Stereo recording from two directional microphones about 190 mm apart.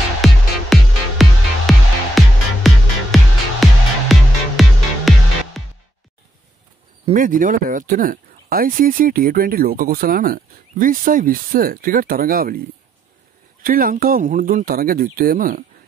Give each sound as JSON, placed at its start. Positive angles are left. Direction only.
{"t": 0.2, "sound": "music", "side_deg": 0}
{"t": 7.2, "sound": "speech", "side_deg": -45}